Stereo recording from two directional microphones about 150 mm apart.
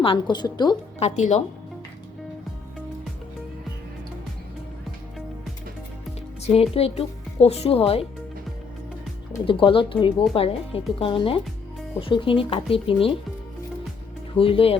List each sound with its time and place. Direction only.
0.0 s a woman's voice: 35° left (ahead or behind)
0.9 s a woman's voice: 50° left (ahead or behind)
6.4 s speech: 40° left (ahead or behind)
9.5 s speech: 35° left (ahead or behind)
14.3 s speech: 40° left (ahead or behind)